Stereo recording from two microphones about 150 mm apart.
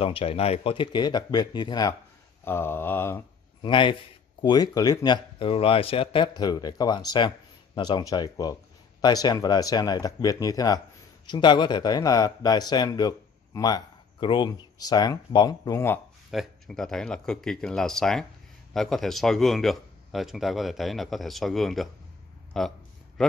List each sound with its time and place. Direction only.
0.0 s speech: 40° left (ahead or behind)
2.4 s mantra: 15° left (ahead or behind)
3.6 s a man's voice: 35° left (ahead or behind)
16.3 s speech: centre (ahead or behind)